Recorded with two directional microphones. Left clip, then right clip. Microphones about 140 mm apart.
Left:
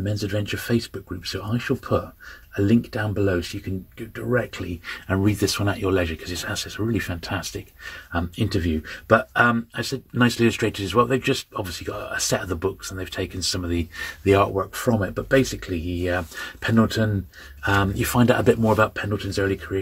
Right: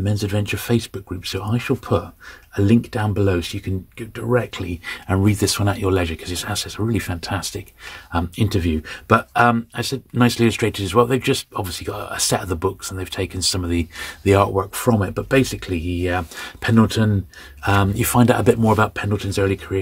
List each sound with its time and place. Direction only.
0.0 s speech: 55° right (ahead or behind)
9.3 s speech: 40° right (ahead or behind); by 17.1 s 55° right (ahead or behind)
17.6 s speech: 40° right (ahead or behind)